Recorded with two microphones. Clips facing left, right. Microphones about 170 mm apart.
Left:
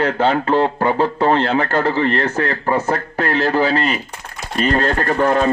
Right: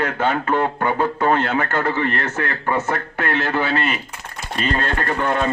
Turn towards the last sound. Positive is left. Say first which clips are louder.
# left 5 dB
turn(degrees=35)  # may be behind; listen again after turning